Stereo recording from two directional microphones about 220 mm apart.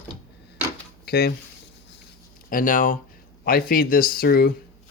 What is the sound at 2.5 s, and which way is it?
Speech, 40° left (ahead or behind).